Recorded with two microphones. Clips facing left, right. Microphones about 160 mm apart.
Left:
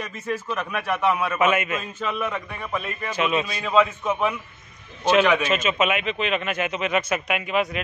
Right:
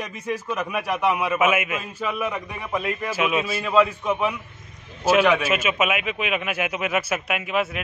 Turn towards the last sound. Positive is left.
turn(degrees=-5)  # may be behind; listen again after turning